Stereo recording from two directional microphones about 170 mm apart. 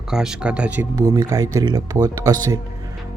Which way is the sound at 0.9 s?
20° right (ahead or behind).